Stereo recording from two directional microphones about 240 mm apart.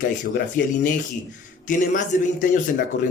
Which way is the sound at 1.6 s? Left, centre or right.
Left.